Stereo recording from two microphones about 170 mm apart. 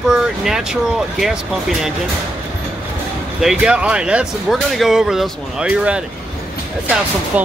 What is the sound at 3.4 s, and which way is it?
Speech, 5° right (ahead or behind).